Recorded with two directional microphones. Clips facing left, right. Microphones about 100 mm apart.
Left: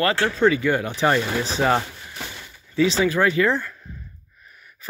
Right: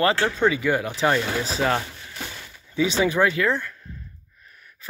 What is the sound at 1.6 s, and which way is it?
Speech, 15° left (ahead or behind).